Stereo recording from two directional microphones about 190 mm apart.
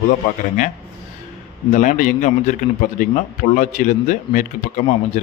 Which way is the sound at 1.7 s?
40° left (ahead or behind).